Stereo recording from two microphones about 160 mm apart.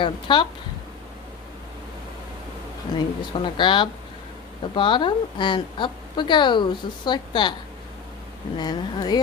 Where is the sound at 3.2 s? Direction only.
30° left (ahead or behind).